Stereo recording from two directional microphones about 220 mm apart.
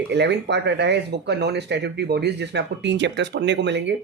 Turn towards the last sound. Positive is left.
turn(degrees=-50)  # may be behind; listen again after turning